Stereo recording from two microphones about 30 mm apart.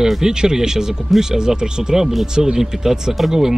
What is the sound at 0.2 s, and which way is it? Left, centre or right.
Speech, right.